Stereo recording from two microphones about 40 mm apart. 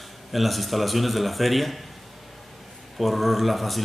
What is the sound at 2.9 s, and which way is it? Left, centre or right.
Speech, centre.